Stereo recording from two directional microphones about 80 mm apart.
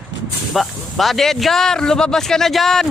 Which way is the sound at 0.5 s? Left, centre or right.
Centre.